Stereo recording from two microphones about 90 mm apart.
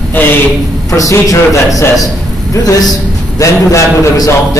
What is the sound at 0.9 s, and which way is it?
A man's voice, 40° left (ahead or behind).